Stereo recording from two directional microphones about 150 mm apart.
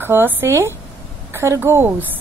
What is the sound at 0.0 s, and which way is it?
Speech, 15° right (ahead or behind).